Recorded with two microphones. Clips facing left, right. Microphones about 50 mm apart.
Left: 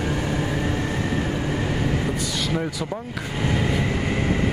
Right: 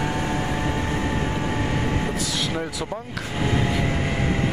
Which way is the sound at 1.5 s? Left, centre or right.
Right.